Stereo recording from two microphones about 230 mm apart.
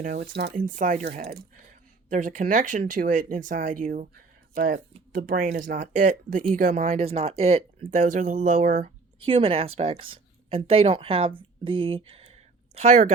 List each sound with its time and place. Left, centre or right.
0.0 s speech: right